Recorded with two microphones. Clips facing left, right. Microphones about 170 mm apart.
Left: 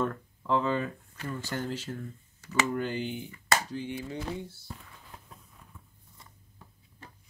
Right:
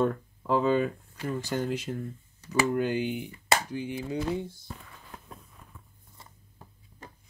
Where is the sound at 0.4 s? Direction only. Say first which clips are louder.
Right 4 dB; 15° right (ahead or behind).